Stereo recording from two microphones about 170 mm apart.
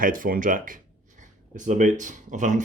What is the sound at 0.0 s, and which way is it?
Speech, 55° right (ahead or behind).